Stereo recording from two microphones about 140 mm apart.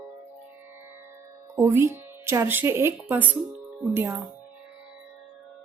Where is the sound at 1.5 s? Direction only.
15° right (ahead or behind).